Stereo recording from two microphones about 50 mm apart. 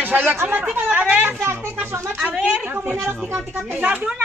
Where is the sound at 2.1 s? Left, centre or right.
Centre.